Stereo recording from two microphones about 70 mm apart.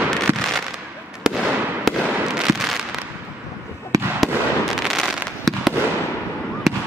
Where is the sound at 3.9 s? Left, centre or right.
Right.